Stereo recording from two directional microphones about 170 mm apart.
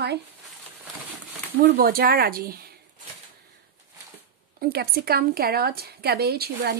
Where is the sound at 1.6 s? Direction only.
60° right (ahead or behind).